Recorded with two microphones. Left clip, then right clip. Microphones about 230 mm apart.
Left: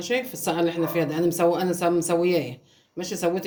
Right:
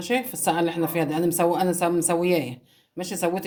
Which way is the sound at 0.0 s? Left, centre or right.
Right.